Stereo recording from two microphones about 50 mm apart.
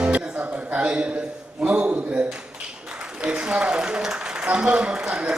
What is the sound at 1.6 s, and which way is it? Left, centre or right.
A man's voice, right.